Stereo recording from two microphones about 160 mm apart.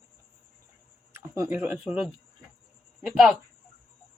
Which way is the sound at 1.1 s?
15° right (ahead or behind).